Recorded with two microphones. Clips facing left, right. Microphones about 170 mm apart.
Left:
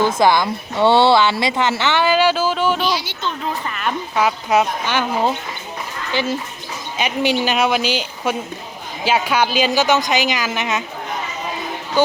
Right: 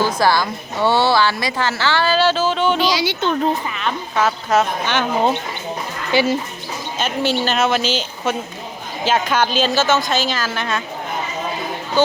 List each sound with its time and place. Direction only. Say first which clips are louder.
0.0 s speech: left 2 dB; 20° left (ahead or behind)
2.8 s speech: right 3 dB; 90° right; by 3.3 s 70° right (ahead or behind)
3.8 s a woman's voice: even; 10° left (ahead or behind)
6.1 s speech: right 5 dB; 15° right (ahead or behind)
7.0 s a woman's voice: left 1 dB; 15° left (ahead or behind)